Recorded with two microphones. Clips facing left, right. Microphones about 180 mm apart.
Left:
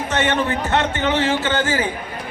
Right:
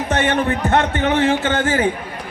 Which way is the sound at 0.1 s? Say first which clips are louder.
Right 2 dB; 50° right (ahead or behind).